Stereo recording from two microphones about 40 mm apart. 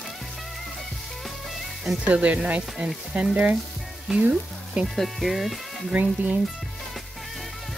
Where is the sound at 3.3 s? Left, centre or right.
Right.